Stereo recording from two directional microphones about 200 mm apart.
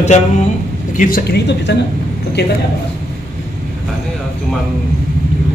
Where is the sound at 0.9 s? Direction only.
45° left (ahead or behind).